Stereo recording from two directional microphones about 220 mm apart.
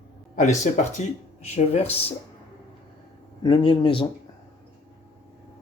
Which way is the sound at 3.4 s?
20° left (ahead or behind).